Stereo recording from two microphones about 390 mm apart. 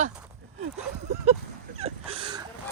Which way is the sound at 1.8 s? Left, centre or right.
Centre.